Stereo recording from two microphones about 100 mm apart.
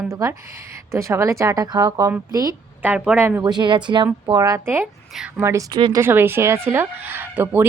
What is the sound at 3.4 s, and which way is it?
Speech, 50° right (ahead or behind).